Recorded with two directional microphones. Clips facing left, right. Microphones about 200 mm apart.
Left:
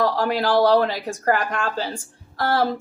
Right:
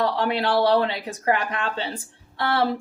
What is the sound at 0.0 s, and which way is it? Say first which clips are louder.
Speech: left 2 dB; centre (ahead or behind).